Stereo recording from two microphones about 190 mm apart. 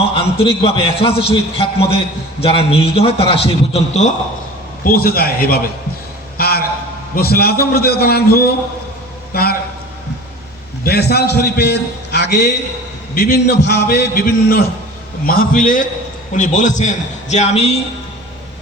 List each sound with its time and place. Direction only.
0.2 s a man's voice: 30° left (ahead or behind)
4.8 s a man's voice: 50° left (ahead or behind)
6.3 s a sound: 55° left (ahead or behind)
7.2 s a man's voice: 55° left (ahead or behind)
10.8 s a man's voice: 55° left (ahead or behind); by 17.7 s 35° left (ahead or behind)